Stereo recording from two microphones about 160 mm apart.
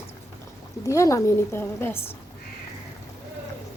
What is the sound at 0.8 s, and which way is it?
A woman's voice, 20° left (ahead or behind).